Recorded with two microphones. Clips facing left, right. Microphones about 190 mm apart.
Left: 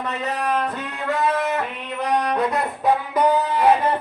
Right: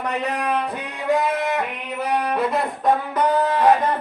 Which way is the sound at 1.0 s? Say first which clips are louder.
Right 1 dB; 15° right (ahead or behind).